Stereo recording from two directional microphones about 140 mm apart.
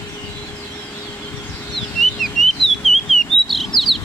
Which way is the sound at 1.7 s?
Centre (ahead or behind).